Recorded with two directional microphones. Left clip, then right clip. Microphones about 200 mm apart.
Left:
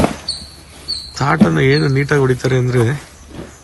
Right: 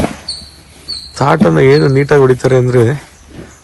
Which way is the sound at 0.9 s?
Centre (ahead or behind).